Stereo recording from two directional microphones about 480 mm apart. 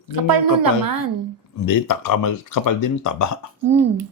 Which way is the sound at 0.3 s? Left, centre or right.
Right.